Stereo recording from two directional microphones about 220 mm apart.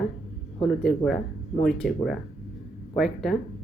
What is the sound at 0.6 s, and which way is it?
Speech, 5° left (ahead or behind).